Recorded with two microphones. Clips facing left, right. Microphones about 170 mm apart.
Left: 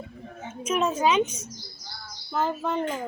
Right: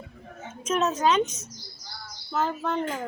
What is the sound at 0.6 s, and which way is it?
A woman's voice, 10° left (ahead or behind).